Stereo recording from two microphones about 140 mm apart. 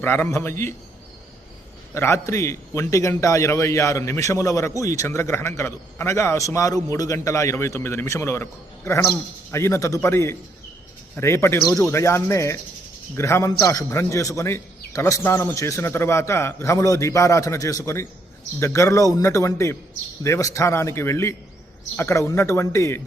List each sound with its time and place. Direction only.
0.0 s a man's voice: 15° left (ahead or behind)
1.9 s a man's voice: 20° left (ahead or behind)